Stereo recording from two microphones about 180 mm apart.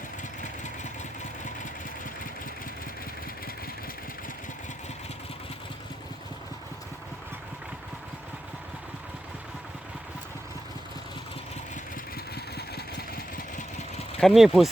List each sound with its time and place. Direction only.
12.1 s vehicle: 60° left (ahead or behind)
14.2 s speech: centre (ahead or behind)